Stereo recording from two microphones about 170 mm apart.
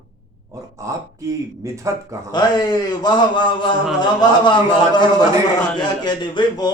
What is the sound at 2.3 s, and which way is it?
A man's voice, 25° left (ahead or behind).